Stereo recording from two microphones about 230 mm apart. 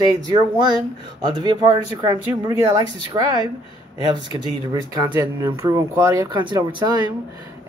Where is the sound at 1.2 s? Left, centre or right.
Centre.